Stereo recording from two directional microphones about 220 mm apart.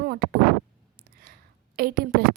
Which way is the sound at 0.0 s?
45° right (ahead or behind).